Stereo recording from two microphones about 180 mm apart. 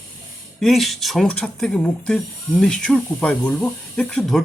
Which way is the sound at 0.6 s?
Centre (ahead or behind).